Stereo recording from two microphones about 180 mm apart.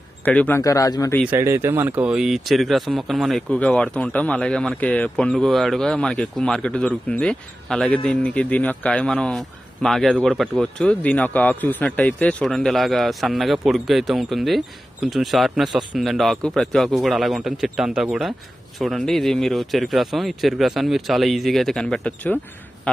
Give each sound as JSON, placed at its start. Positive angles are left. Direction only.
{"t": 0.2, "sound": "a man's voice", "side_deg": 10}
{"t": 1.2, "sound": "speech", "side_deg": -15}